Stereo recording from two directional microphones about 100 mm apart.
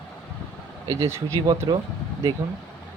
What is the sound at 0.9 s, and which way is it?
Speech, 30° right (ahead or behind).